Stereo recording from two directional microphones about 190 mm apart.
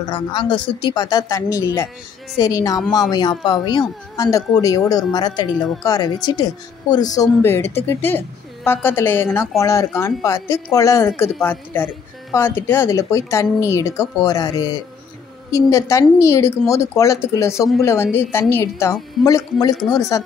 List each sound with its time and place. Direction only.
0.1 s speech: 25° left (ahead or behind)